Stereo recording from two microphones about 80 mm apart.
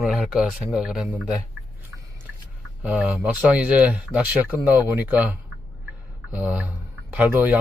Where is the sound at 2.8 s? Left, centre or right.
Centre.